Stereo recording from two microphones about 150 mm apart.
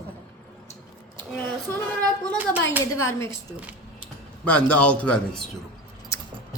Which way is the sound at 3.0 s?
20° left (ahead or behind).